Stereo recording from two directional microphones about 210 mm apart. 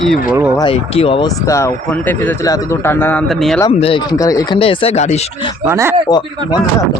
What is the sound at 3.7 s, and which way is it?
Speech, 25° left (ahead or behind).